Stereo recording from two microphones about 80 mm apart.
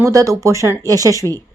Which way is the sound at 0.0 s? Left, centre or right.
Right.